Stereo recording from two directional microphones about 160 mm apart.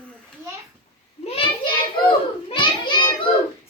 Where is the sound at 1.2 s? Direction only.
35° left (ahead or behind).